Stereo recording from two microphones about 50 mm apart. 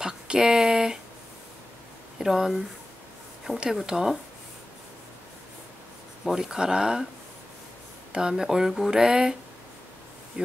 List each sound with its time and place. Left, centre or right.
0.0 s speech: centre
2.1 s speech: centre
3.8 s speech: centre
6.2 s speech: centre
8.1 s speech: centre